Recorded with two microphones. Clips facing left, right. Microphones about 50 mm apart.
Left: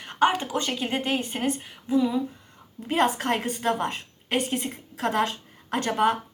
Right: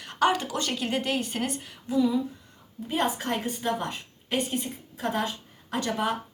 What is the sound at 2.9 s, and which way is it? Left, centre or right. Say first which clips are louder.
A woman's voice: left 4 dB; left.